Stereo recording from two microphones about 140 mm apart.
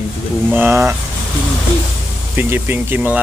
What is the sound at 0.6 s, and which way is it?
Speech, 15° right (ahead or behind).